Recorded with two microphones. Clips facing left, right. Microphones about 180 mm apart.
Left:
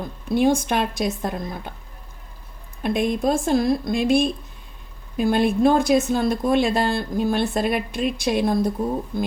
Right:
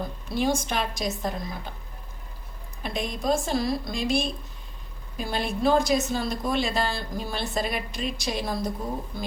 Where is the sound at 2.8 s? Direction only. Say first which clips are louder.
Left 7 dB; 55° left (ahead or behind).